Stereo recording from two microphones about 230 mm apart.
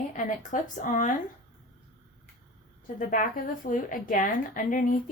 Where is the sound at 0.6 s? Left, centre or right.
Left.